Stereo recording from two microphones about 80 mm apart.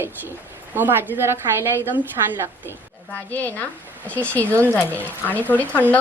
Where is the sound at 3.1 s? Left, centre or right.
Left.